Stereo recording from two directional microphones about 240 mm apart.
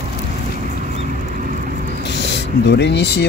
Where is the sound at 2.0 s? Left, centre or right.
Left.